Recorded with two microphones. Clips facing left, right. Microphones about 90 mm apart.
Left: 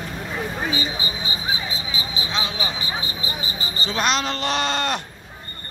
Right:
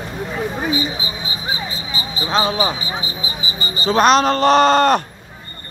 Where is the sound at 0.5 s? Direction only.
5° right (ahead or behind).